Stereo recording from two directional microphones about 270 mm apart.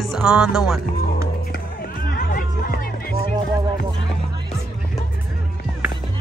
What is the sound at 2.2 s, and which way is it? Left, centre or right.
Music, left.